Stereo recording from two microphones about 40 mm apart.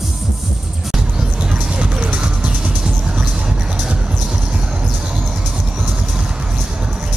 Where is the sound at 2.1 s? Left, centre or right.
Right.